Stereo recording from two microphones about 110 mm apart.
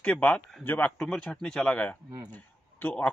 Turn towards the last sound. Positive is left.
turn(degrees=15)  # may be behind; listen again after turning